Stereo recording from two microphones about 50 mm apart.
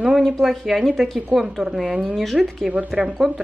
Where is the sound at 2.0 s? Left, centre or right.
Centre.